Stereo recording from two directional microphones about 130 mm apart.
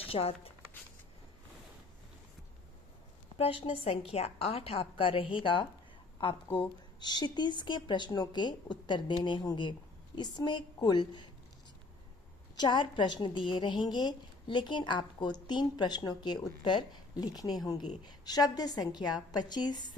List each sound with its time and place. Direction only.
0.0 s speech: 50° left (ahead or behind)
3.3 s a woman's voice: 45° left (ahead or behind)
6.5 s speech: 15° left (ahead or behind)
7.0 s a woman's voice: 35° left (ahead or behind)
12.5 s a woman's voice: 35° left (ahead or behind)